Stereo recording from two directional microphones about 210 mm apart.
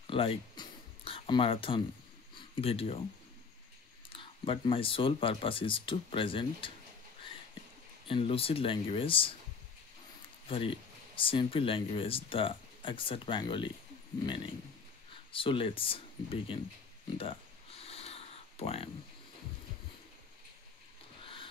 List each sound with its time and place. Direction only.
0.0 s a sound: 25° left (ahead or behind)
2.6 s speech: 30° left (ahead or behind)
4.1 s speech: 25° left (ahead or behind)
8.1 s speech: 25° left (ahead or behind)
10.5 s speech: 25° left (ahead or behind)
15.3 s speech: 25° left (ahead or behind)
17.2 s a sound: 25° left (ahead or behind)